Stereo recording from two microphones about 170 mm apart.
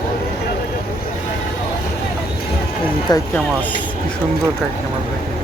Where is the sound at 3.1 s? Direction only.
25° left (ahead or behind).